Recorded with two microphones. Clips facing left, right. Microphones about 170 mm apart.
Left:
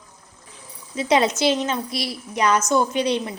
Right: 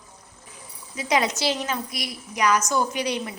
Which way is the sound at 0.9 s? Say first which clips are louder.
Left 5 dB; 25° left (ahead or behind).